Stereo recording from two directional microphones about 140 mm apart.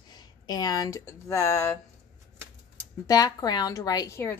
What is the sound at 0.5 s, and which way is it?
Speech, 30° left (ahead or behind).